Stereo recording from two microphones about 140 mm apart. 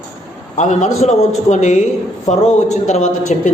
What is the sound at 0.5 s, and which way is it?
A man's voice, 60° left (ahead or behind).